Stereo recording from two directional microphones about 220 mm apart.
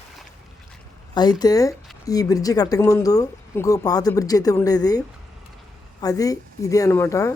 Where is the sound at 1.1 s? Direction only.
20° left (ahead or behind).